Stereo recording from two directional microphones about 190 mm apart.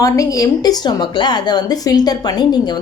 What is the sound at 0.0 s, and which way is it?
A woman's voice, 15° left (ahead or behind).